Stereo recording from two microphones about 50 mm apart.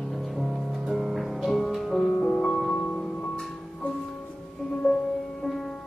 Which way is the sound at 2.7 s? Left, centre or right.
Centre.